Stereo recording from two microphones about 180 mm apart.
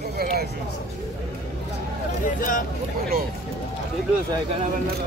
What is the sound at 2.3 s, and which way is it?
Speech, 50° left (ahead or behind).